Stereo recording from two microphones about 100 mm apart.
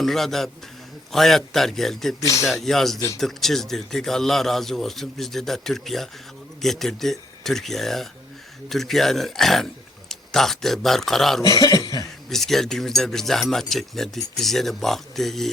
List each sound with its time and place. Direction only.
0.0 s speech: 5° left (ahead or behind)
2.2 s speech: 35° left (ahead or behind)
2.5 s speech: 5° left (ahead or behind)
11.4 s cough: 40° left (ahead or behind)
12.3 s speech: 5° left (ahead or behind)